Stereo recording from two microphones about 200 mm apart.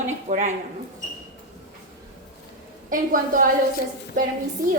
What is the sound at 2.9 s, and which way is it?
Speech, 45° right (ahead or behind).